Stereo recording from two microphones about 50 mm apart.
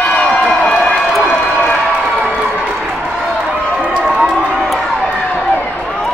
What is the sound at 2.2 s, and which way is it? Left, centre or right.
Crowd, right.